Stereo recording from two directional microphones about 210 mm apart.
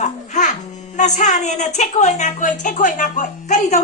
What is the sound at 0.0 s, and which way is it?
Music, 35° left (ahead or behind).